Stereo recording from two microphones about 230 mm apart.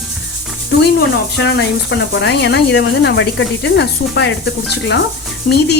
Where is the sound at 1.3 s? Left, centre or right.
Left.